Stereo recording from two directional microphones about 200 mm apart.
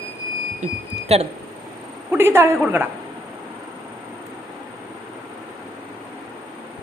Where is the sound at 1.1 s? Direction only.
30° right (ahead or behind).